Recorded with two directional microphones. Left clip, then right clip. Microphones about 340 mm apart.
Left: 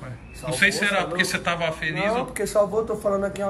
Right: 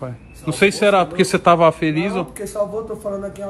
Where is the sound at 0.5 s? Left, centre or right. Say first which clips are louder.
Right 6 dB; centre.